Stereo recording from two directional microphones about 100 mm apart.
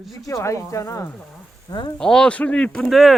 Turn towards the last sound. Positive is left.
turn(degrees=0)  # may be behind; listen again after turning